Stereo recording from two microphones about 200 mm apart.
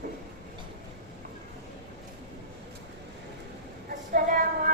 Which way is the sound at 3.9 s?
40° right (ahead or behind).